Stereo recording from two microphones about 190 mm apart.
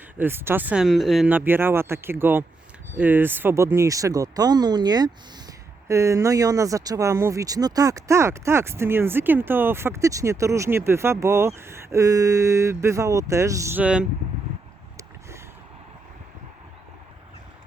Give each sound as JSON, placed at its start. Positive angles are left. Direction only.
{"t": 0.2, "sound": "speech", "side_deg": -10}